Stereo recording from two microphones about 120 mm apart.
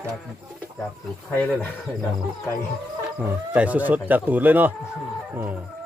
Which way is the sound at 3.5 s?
10° right (ahead or behind).